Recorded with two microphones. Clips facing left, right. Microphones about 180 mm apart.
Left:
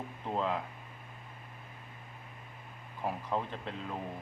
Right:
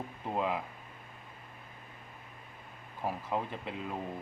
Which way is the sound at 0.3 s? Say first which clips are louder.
Even; 10° right (ahead or behind).